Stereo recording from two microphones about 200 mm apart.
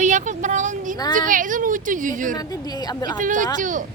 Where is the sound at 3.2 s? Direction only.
40° right (ahead or behind).